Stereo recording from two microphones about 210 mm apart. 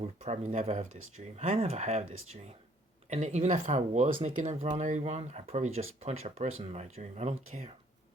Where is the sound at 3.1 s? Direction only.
30° right (ahead or behind).